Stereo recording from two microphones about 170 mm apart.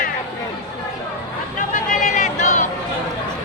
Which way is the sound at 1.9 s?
50° left (ahead or behind).